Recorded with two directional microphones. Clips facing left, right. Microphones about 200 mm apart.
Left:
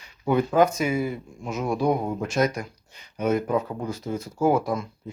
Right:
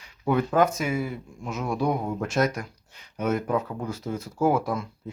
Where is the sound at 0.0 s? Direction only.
Centre (ahead or behind).